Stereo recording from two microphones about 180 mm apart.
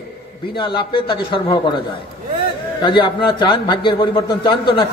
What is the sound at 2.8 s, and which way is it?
A man's voice, 25° left (ahead or behind).